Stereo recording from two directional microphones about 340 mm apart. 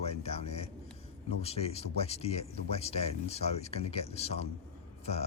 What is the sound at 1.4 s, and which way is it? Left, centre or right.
Speech, centre.